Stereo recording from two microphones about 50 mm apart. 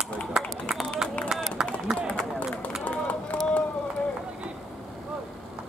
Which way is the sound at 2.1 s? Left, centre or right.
Left.